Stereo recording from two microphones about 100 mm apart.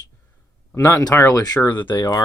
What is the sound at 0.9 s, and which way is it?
Speech, 35° left (ahead or behind).